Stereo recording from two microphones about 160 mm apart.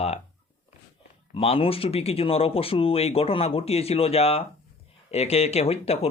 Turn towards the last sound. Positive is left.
turn(degrees=40)  # may be behind; listen again after turning